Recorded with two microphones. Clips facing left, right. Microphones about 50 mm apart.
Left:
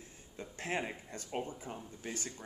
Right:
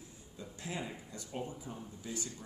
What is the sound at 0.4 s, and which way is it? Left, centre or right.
Speech, left.